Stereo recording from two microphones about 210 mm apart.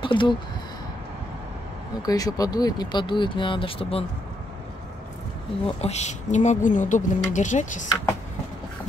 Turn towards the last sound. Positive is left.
turn(degrees=35)  # may be behind; listen again after turning